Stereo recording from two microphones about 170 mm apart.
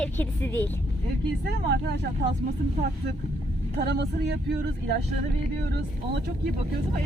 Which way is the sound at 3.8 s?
85° right.